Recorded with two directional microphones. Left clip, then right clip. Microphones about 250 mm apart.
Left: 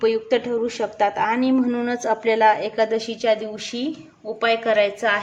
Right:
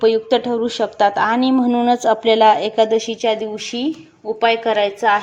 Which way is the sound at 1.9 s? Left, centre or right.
Centre.